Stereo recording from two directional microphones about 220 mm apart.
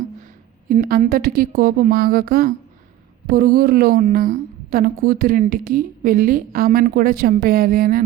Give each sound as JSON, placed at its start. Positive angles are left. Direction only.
{"t": 0.7, "sound": "a woman's voice", "side_deg": -40}